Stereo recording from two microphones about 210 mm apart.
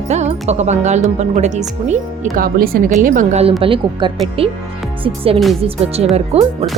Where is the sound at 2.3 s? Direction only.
45° right (ahead or behind).